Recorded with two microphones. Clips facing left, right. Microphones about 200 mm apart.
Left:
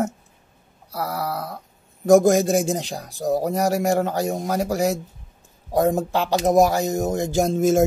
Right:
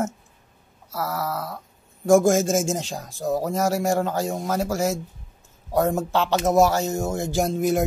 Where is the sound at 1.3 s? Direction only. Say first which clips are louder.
Left 1 dB; 40° left (ahead or behind).